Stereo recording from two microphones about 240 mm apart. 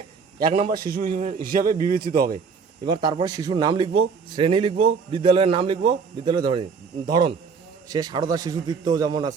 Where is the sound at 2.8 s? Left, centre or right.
Centre.